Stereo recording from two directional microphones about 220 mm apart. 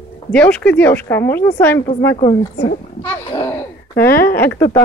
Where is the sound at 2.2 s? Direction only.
25° left (ahead or behind).